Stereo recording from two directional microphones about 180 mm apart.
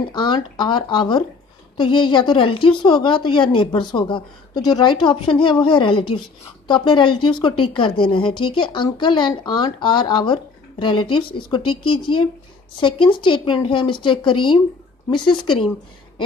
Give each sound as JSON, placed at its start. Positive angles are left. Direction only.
{"t": 0.1, "sound": "a woman's voice", "side_deg": 25}